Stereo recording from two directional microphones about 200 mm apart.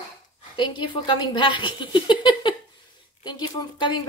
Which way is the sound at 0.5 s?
25° left (ahead or behind).